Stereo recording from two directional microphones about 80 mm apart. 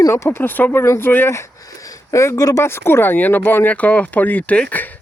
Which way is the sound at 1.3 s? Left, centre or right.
Left.